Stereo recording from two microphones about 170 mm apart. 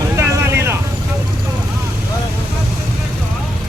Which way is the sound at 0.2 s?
15° right (ahead or behind).